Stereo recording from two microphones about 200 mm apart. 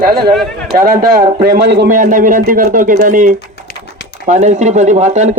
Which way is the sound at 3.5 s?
55° left (ahead or behind).